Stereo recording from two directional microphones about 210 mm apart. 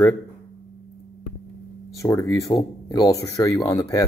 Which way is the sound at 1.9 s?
15° left (ahead or behind).